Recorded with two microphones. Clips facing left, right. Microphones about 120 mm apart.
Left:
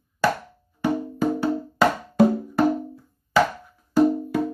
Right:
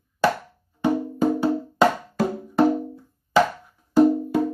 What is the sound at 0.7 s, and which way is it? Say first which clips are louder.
Music: right 2 dB; 20° right (ahead or behind).